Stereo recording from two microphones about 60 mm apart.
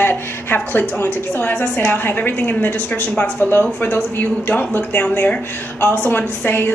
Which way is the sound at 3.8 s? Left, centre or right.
Left.